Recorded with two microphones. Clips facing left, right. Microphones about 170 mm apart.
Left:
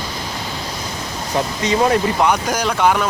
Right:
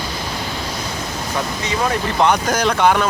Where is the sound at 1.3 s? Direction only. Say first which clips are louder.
Left 5 dB; 30° left (ahead or behind).